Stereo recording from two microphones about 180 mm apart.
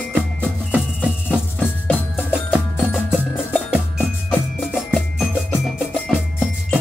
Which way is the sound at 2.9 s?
Centre (ahead or behind).